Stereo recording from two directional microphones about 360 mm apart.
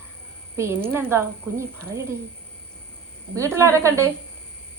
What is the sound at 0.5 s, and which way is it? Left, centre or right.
Speech, centre.